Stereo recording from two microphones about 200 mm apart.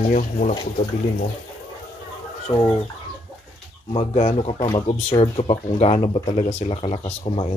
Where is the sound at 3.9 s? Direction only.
30° left (ahead or behind).